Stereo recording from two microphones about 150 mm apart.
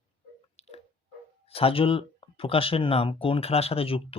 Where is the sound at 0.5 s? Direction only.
45° left (ahead or behind).